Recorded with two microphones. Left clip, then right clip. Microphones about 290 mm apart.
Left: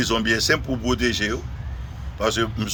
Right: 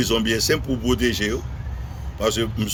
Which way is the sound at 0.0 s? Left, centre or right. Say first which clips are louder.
Even; centre.